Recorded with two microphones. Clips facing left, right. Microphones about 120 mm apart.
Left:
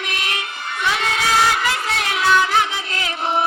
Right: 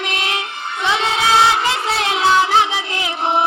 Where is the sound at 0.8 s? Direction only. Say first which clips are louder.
Right 3 dB; 25° right (ahead or behind).